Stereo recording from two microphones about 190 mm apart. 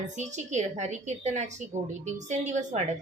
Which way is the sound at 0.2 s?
40° right (ahead or behind).